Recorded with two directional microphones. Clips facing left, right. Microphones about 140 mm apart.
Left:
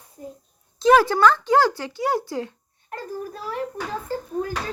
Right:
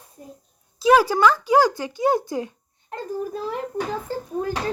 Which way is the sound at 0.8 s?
10° right (ahead or behind).